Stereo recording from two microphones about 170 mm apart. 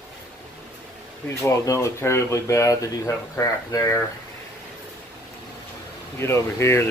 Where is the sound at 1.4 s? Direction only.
20° left (ahead or behind).